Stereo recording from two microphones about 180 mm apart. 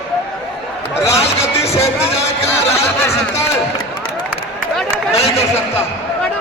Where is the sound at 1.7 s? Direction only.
15° left (ahead or behind).